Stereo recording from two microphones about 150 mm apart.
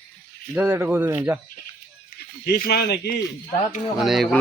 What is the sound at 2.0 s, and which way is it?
Speech, 80° left.